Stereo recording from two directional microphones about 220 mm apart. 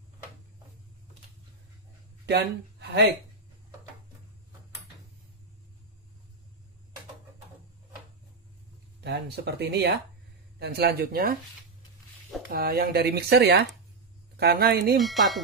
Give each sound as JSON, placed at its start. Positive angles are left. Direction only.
{"t": 2.2, "sound": "speech", "side_deg": -50}
{"t": 9.0, "sound": "speech", "side_deg": -50}
{"t": 12.4, "sound": "speech", "side_deg": -45}
{"t": 15.0, "sound": "speech", "side_deg": 0}